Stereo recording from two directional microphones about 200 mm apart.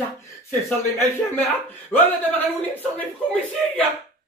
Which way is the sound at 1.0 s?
10° left (ahead or behind).